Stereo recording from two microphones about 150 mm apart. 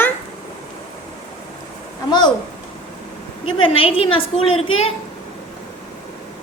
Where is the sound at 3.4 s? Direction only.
35° left (ahead or behind).